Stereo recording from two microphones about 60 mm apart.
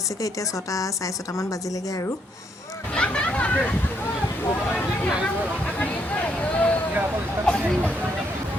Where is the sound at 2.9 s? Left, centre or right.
Centre.